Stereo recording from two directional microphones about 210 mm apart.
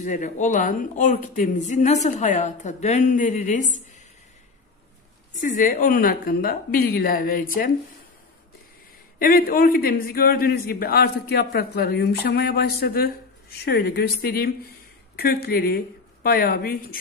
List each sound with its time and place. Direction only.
0.0 s speech: 35° left (ahead or behind)
5.4 s a man's voice: 40° left (ahead or behind)
9.2 s a man's voice: 45° left (ahead or behind)